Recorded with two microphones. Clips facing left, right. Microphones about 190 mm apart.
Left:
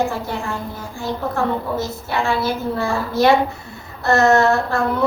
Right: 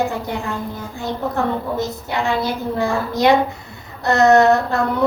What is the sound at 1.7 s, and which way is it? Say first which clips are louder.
A woman's voice: even; 15° right (ahead or behind).